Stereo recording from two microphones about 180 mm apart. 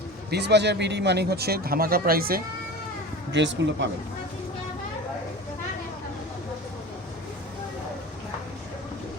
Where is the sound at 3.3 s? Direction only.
80° right.